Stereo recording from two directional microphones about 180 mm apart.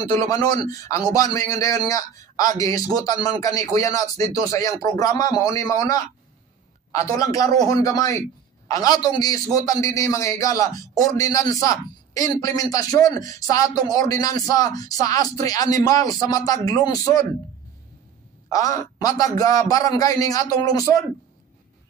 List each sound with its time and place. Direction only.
0.3 s a man's voice: 20° left (ahead or behind)
18.5 s a man's voice: 20° left (ahead or behind)